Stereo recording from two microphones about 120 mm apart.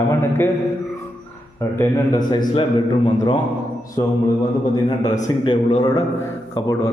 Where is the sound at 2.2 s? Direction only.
35° left (ahead or behind).